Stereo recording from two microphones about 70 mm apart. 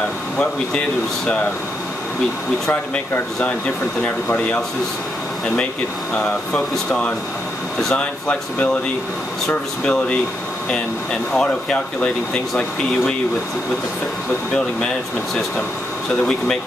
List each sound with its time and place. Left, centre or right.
0.4 s speech: centre
2.7 s speech: centre
6.1 s speech: centre
11.3 s speech: centre